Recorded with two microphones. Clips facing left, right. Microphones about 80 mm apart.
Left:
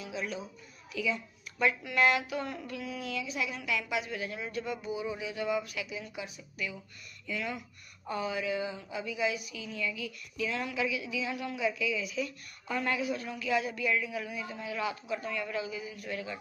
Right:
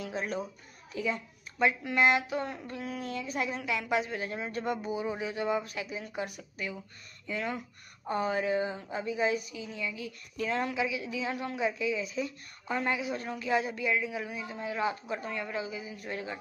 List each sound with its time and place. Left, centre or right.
0.0 s a child's voice: right
1.6 s speech: right
3.6 s speech: right
10.3 s speech: right
13.2 s a man's voice: right